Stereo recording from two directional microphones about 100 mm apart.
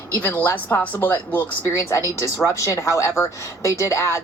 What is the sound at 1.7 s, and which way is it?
A woman's voice, 25° left (ahead or behind).